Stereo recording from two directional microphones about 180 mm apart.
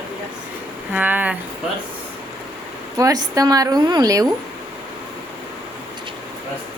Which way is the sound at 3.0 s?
20° right (ahead or behind).